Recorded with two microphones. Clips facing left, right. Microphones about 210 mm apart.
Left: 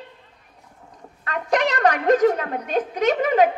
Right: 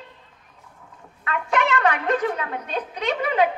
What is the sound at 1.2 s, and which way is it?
A woman's voice, 40° left (ahead or behind).